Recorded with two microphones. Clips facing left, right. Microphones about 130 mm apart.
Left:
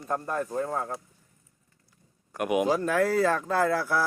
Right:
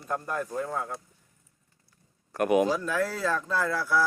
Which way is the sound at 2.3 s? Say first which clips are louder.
Right 3 dB; 10° left (ahead or behind).